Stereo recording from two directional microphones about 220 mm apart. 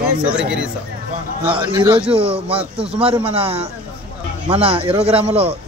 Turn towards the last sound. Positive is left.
turn(degrees=-25)  # may be behind; listen again after turning